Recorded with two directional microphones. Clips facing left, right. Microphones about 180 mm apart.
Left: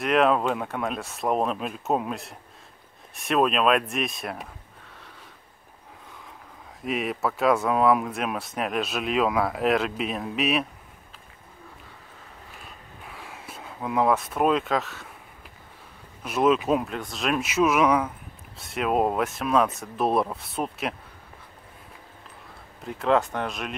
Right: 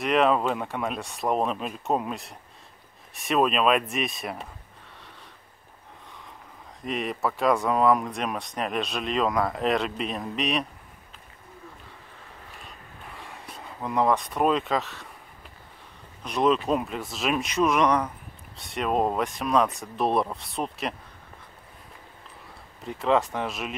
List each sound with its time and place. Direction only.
0.0 s speech: centre (ahead or behind)
6.8 s speech: 5° left (ahead or behind)
13.0 s a sound: centre (ahead or behind)
16.2 s speech: 5° left (ahead or behind)
22.8 s speech: centre (ahead or behind)